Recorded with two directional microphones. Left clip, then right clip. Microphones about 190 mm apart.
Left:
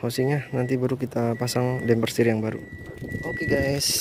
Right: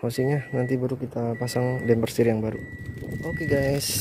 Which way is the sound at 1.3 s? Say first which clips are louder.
Right 1 dB; centre (ahead or behind).